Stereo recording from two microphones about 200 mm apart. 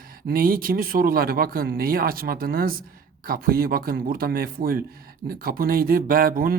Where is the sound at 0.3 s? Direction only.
45° right (ahead or behind).